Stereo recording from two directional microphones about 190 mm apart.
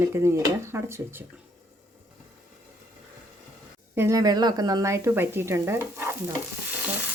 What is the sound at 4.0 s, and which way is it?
Speech, 15° right (ahead or behind).